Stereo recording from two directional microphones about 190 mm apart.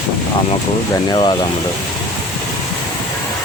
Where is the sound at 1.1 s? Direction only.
25° left (ahead or behind).